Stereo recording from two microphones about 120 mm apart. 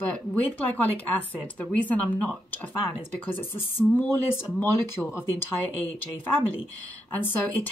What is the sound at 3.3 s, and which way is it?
Speech, 15° left (ahead or behind).